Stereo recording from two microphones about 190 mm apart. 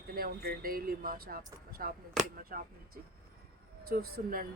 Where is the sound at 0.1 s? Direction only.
50° right (ahead or behind).